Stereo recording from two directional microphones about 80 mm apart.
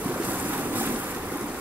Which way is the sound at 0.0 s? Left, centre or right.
Centre.